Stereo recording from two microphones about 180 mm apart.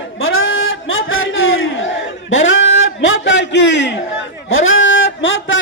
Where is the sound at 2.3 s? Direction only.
90° left.